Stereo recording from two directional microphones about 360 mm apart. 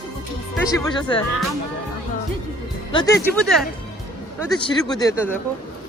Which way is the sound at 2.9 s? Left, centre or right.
Centre.